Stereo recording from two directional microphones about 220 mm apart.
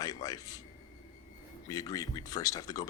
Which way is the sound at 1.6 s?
15° left (ahead or behind).